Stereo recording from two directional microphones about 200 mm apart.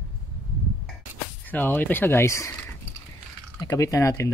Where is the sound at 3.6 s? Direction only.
15° left (ahead or behind).